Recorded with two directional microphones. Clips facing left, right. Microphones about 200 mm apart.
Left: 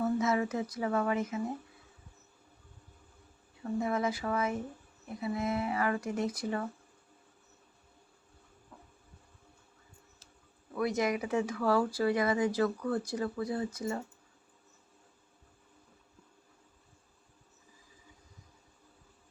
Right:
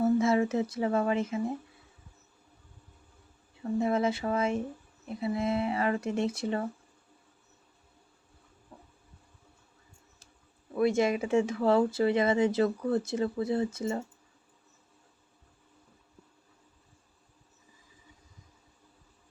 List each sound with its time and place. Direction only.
0.0 s speech: 25° right (ahead or behind)
3.6 s speech: 25° right (ahead or behind)
10.8 s speech: 25° right (ahead or behind)